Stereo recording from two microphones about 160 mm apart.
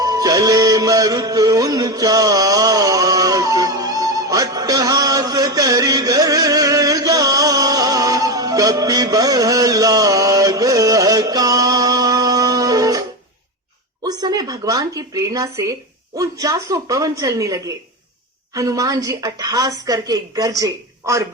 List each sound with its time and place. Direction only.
0.0 s music: 20° right (ahead or behind)
14.0 s a woman's voice: 25° right (ahead or behind)